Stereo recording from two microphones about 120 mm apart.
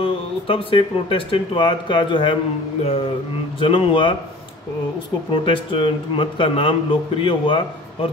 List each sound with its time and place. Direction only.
0.0 s speech: 50° left (ahead or behind)
3.5 s speech: 50° left (ahead or behind)
5.3 s speech: 45° left (ahead or behind)